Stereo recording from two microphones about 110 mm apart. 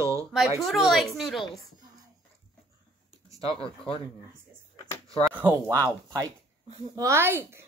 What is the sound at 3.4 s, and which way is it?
Speech, 55° left (ahead or behind).